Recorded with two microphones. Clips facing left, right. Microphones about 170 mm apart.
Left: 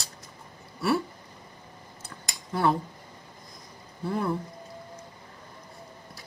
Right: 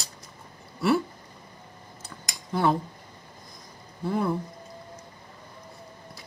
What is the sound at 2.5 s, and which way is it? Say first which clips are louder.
Speech: right 1 dB; 20° right (ahead or behind).